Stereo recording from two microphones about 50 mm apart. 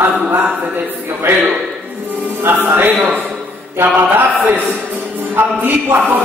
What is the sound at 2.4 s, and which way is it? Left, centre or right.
Speech, right.